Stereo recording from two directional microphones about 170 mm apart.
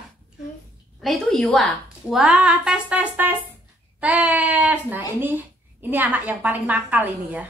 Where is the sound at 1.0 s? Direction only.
5° left (ahead or behind).